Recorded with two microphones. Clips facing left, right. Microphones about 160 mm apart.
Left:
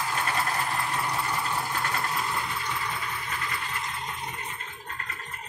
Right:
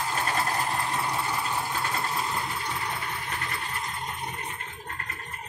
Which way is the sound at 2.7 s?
40° right (ahead or behind).